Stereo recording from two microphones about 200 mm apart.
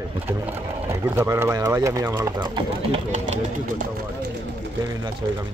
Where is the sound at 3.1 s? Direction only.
40° right (ahead or behind).